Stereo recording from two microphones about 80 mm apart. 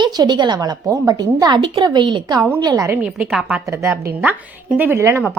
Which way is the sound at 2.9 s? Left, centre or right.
Centre.